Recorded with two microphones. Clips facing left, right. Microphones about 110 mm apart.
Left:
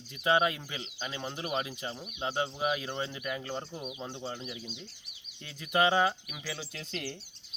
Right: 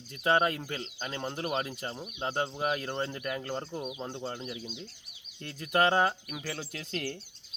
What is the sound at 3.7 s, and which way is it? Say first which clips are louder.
Speech: right 3 dB; 25° right (ahead or behind).